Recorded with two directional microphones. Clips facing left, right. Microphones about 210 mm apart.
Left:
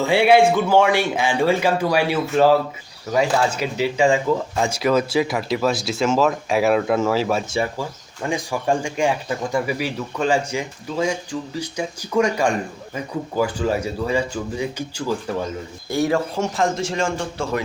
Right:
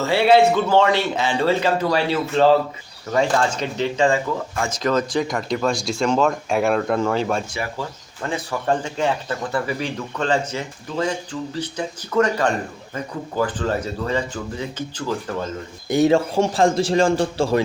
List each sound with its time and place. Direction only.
0.0 s speech: 15° left (ahead or behind)
15.9 s a man's voice: 20° right (ahead or behind)